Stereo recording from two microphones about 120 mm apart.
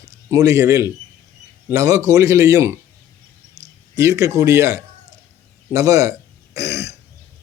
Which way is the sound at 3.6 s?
75° right (ahead or behind).